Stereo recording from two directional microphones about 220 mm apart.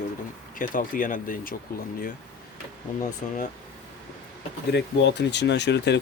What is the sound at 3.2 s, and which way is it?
Speech, 35° left (ahead or behind).